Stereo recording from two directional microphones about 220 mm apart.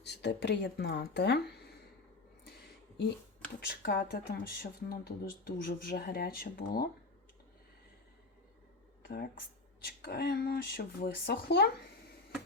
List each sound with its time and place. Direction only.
0.0 s speech: 50° left (ahead or behind)
3.6 s speech: 45° left (ahead or behind)
9.0 s speech: 45° left (ahead or behind)